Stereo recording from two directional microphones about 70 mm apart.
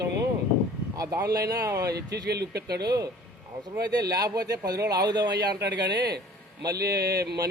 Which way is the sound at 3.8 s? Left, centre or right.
Right.